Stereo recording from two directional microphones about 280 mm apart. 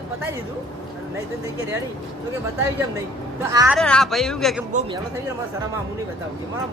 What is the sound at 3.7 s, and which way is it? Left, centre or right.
Speech, centre.